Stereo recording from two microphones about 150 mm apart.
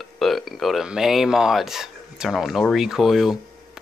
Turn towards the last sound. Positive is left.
turn(degrees=0)  # may be behind; listen again after turning